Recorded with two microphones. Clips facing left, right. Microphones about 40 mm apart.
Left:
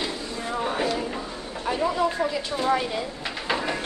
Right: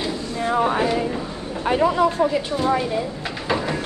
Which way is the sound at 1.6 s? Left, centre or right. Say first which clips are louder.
Right 6 dB; right.